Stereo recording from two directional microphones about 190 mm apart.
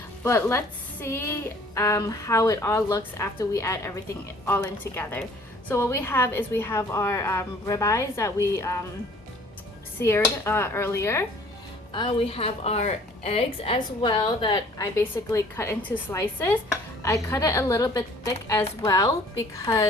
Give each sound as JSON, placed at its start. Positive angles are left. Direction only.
{"t": 0.2, "sound": "a woman's voice", "side_deg": 15}
{"t": 10.0, "sound": "a woman's voice", "side_deg": 15}
{"t": 11.9, "sound": "a woman's voice", "side_deg": 30}